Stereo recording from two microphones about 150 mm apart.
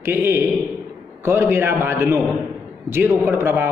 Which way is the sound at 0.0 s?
15° right (ahead or behind).